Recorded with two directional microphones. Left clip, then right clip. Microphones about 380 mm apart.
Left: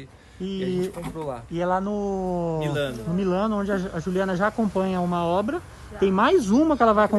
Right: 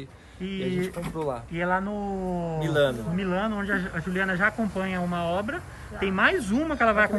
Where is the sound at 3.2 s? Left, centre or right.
Centre.